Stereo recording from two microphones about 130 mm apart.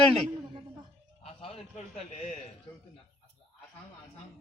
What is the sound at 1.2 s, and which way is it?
A man's voice, 55° left (ahead or behind).